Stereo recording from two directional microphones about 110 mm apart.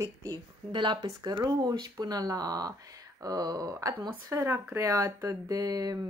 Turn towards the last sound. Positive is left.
turn(degrees=-35)  # may be behind; listen again after turning